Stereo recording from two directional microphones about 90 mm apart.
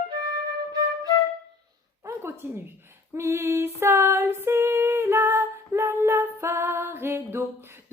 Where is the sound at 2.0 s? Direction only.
25° right (ahead or behind).